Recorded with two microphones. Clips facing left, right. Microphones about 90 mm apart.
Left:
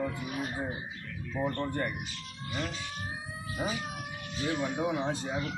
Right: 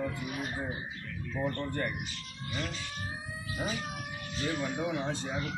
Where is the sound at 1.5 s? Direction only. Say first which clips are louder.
Left 2 dB; 20° left (ahead or behind).